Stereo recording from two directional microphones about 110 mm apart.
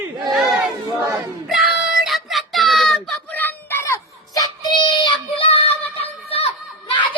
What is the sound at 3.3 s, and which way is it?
Child singing, 20° left (ahead or behind).